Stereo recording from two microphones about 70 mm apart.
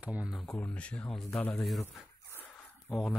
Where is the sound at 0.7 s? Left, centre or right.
Centre.